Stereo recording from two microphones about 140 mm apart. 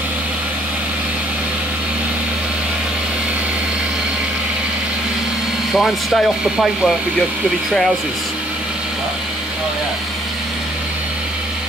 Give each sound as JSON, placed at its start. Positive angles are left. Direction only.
{"t": 5.7, "sound": "speech", "side_deg": 0}